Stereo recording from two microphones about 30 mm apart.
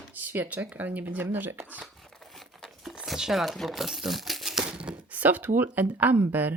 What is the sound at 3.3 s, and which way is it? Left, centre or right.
Speech, centre.